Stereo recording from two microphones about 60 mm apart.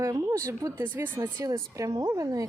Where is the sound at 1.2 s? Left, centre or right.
Right.